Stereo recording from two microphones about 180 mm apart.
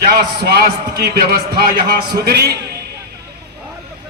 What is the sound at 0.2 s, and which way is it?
A man's voice, 60° right (ahead or behind).